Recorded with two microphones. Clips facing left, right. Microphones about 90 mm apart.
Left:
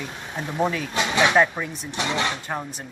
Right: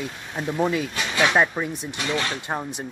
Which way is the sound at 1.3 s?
10° right (ahead or behind).